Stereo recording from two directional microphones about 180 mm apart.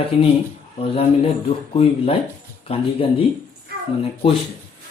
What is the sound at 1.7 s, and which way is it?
Speech, 35° left (ahead or behind).